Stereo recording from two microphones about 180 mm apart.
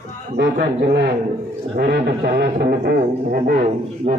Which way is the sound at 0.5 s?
55° right (ahead or behind).